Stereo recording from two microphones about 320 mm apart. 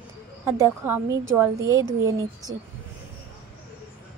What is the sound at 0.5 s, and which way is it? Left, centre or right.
Speech, centre.